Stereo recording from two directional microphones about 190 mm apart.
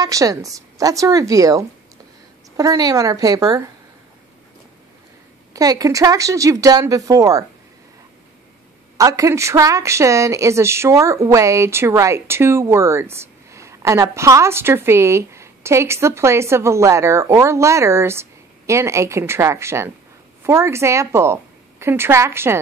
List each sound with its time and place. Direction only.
0.0 s a woman's voice: 20° right (ahead or behind)
5.5 s speech: 20° right (ahead or behind)
8.9 s a woman's voice: 15° right (ahead or behind)